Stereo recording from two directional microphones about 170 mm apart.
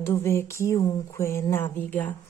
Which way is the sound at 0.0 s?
15° left (ahead or behind).